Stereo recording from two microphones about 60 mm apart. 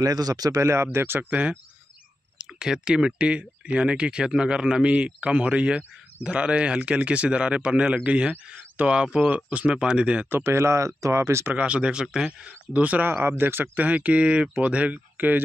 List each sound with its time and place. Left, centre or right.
0.0 s speech: right
0.9 s speech: right
1.3 s speech: right
2.3 s speech: centre
10.4 s speech: right
11.5 s speech: centre
13.1 s speech: right
13.7 s speech: right